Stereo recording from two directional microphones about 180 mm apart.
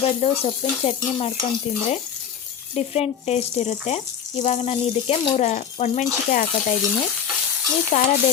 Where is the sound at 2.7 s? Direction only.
35° left (ahead or behind).